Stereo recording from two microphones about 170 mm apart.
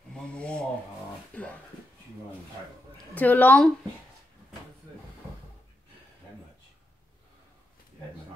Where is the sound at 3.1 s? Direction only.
10° left (ahead or behind).